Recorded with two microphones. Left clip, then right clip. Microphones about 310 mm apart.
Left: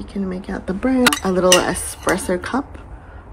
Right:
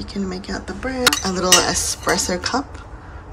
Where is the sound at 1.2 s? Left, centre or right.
Centre.